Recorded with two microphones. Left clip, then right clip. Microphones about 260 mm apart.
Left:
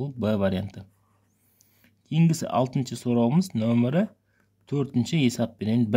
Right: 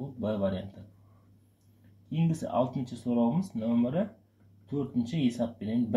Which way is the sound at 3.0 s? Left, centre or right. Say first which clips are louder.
Left 5 dB; left.